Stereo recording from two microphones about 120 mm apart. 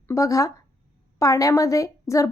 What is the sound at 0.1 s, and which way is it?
A woman's voice, 30° left (ahead or behind).